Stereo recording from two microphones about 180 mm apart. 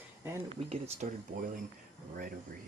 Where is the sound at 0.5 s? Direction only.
35° right (ahead or behind).